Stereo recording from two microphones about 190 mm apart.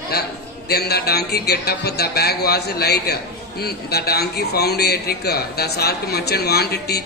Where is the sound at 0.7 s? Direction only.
55° left (ahead or behind).